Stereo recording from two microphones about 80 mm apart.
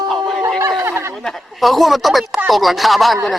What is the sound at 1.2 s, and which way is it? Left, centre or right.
Speech, centre.